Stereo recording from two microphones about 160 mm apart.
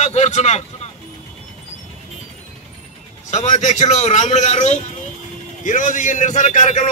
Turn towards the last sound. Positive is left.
turn(degrees=50)  # may be behind; listen again after turning